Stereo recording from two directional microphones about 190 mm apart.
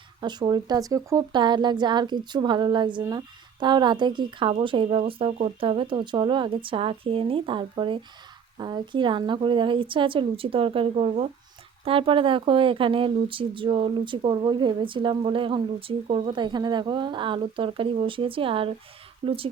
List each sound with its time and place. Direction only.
0.2 s speech: 25° right (ahead or behind)